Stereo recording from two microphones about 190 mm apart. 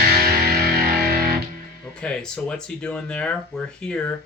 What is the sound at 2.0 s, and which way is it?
Speech, 5° left (ahead or behind).